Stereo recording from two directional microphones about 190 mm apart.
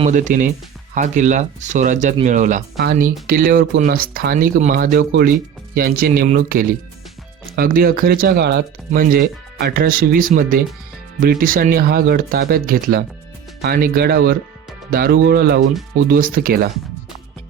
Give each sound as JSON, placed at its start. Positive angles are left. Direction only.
{"t": 0.0, "sound": "speech", "side_deg": -40}
{"t": 2.8, "sound": "speech", "side_deg": -55}
{"t": 8.9, "sound": "speech", "side_deg": -50}